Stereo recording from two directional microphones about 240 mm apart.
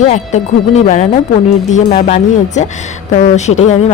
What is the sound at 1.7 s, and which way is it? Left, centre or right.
A woman's voice, left.